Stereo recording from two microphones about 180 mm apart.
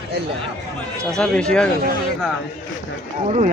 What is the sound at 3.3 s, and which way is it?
Speech, 40° right (ahead or behind).